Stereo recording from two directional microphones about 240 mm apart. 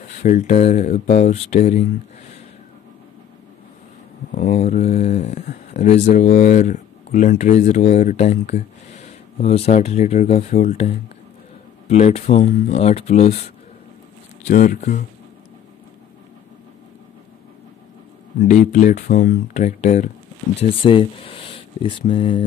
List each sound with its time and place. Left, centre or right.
0.2 s speech: left
4.3 s speech: left
14.4 s speech: left
18.5 s speech: left